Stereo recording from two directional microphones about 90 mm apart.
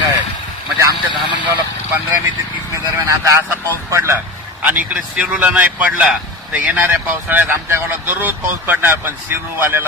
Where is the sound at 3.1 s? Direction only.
35° right (ahead or behind).